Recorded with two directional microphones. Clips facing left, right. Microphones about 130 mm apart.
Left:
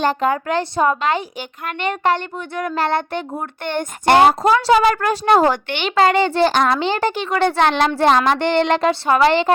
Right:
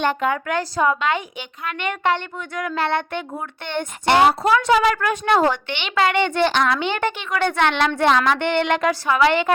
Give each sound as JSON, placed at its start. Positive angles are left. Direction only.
{"t": 0.0, "sound": "a woman's voice", "side_deg": 35}
{"t": 4.3, "sound": "a woman's voice", "side_deg": 35}